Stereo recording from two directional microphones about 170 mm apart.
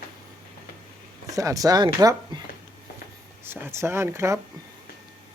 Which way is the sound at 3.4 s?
15° right (ahead or behind).